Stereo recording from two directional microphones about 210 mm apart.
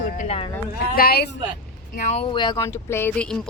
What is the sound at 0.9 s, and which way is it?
Speech, 45° left (ahead or behind).